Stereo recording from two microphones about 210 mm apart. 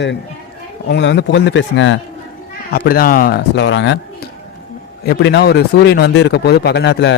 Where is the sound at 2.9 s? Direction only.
45° left (ahead or behind).